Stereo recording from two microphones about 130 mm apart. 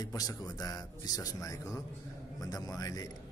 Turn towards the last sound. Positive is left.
turn(degrees=30)  # may be behind; listen again after turning